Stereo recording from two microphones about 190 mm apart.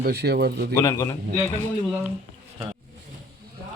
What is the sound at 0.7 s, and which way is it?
Speech, 15° left (ahead or behind).